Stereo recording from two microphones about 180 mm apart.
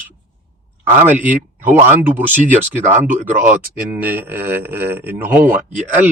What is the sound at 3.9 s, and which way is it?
Speech, 10° right (ahead or behind).